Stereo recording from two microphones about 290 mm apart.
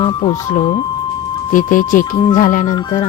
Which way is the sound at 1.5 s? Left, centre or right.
Left.